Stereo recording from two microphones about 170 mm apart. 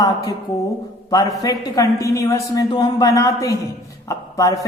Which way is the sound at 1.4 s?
20° left (ahead or behind).